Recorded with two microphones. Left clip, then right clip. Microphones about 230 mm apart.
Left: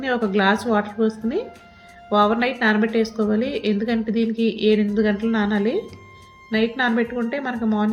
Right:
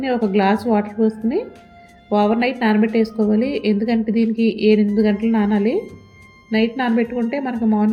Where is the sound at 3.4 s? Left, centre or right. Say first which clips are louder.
Right 3 dB; left.